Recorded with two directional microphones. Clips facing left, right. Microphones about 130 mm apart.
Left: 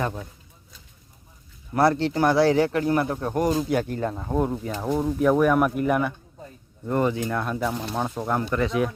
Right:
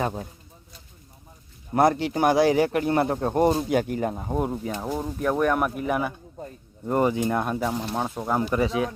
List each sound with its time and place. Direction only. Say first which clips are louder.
0.0 s speech: right 1 dB; 30° right (ahead or behind)
1.7 s speech: even; 20° right (ahead or behind); by 6.1 s 5° right (ahead or behind)
6.8 s speech: right 1 dB; 15° right (ahead or behind)
7.6 s speech: even; 5° right (ahead or behind)